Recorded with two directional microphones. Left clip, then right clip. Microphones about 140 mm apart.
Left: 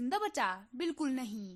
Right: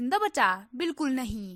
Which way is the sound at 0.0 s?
35° right (ahead or behind).